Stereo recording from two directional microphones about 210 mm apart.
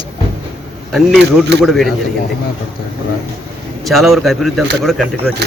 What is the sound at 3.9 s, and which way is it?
A man's voice, centre (ahead or behind).